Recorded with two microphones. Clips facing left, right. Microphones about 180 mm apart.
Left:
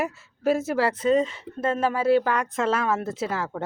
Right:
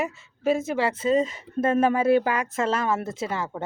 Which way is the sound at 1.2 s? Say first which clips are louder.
Even; 40° right (ahead or behind).